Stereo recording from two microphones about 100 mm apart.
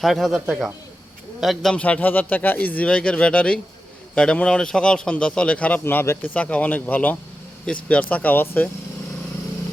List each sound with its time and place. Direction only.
0.0 s a man's voice: centre (ahead or behind)
1.7 s speech: 15° left (ahead or behind)
5.8 s speech: 25° left (ahead or behind)